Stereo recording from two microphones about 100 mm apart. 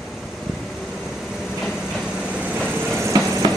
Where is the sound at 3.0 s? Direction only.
35° right (ahead or behind).